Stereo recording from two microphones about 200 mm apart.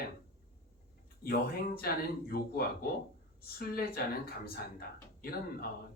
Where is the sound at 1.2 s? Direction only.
50° left (ahead or behind).